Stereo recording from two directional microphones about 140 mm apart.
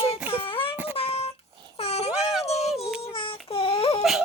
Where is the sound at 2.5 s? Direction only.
Centre (ahead or behind).